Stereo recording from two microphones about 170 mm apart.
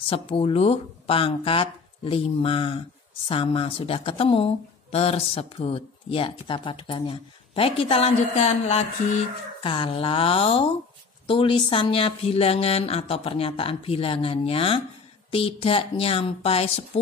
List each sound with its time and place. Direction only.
0.1 s speech: 35° left (ahead or behind)
9.6 s speech: 30° left (ahead or behind)